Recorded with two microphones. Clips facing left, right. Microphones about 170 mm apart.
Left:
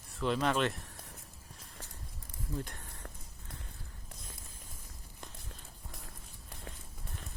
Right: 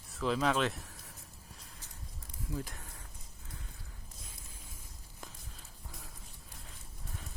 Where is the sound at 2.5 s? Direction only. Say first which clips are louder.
Even; centre (ahead or behind).